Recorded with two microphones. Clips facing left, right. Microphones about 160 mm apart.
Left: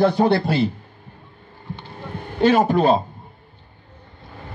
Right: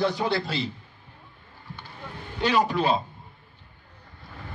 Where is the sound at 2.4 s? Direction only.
50° left (ahead or behind).